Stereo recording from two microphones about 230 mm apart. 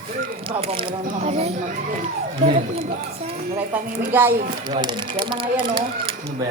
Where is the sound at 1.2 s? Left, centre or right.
Right.